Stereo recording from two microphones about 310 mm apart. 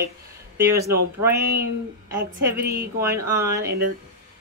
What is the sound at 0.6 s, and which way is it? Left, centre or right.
Speech, centre.